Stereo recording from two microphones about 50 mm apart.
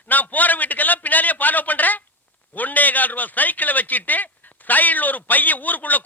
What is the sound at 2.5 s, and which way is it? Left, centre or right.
A man's voice, left.